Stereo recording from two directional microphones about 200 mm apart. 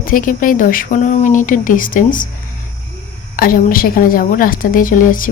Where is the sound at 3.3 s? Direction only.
45° left (ahead or behind).